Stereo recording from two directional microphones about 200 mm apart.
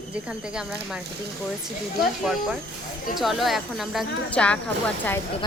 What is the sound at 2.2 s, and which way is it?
Speech, centre (ahead or behind).